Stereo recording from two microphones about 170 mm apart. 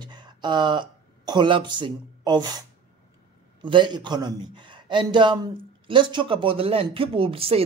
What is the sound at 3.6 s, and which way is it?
Speech, 25° right (ahead or behind).